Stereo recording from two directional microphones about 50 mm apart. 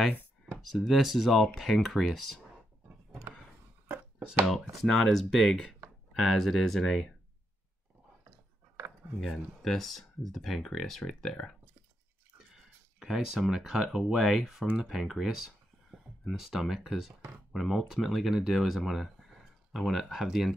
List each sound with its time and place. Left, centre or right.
0.5 s speech: centre
3.8 s a sound: right
4.8 s speech: centre
9.2 s speech: centre
13.0 s speech: centre